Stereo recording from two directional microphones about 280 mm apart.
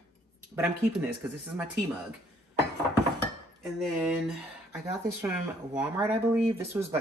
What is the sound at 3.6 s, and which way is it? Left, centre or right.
Speech, centre.